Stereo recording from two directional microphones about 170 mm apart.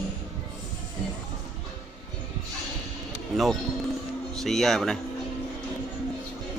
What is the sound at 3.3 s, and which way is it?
Speech, centre (ahead or behind).